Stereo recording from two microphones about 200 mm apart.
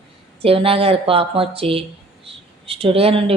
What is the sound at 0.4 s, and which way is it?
A woman's voice, 30° right (ahead or behind).